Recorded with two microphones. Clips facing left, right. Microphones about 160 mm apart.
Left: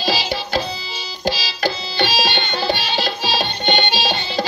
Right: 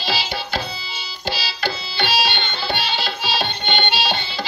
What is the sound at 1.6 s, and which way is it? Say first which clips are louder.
Music: left 5 dB; 45° left (ahead or behind).